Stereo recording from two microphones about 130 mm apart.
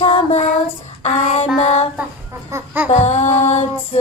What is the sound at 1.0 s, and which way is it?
Music, 60° left (ahead or behind).